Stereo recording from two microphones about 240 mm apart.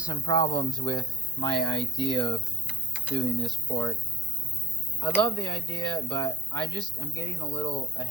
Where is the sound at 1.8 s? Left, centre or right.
Centre.